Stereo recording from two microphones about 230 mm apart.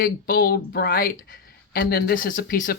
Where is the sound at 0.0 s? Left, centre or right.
Left.